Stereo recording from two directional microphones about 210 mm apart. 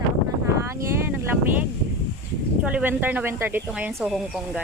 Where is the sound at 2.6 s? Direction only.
5° right (ahead or behind).